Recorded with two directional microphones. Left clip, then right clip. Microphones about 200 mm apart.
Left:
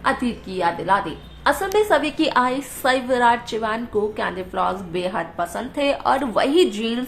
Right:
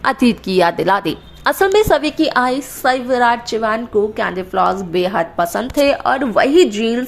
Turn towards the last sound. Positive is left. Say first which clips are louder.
# right 6 dB
turn(degrees=-20)  # may be behind; listen again after turning